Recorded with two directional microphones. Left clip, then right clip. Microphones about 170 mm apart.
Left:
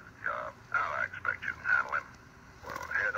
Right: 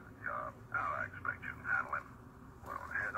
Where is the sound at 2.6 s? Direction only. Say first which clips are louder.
Left 7 dB; 35° left (ahead or behind).